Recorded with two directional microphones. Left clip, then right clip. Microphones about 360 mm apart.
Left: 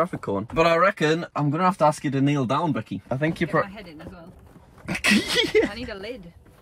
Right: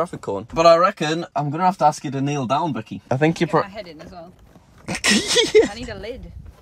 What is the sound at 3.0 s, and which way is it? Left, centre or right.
Speech, centre.